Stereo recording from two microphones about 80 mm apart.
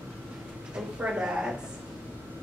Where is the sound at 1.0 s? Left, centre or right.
Centre.